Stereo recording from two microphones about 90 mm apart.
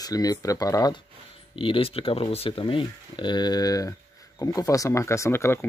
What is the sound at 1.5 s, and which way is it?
Speech, 75° left (ahead or behind).